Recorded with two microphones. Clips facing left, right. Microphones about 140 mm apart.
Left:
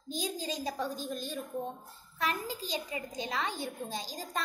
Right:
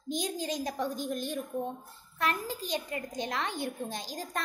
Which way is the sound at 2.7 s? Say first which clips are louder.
Right 4 dB; 10° left (ahead or behind).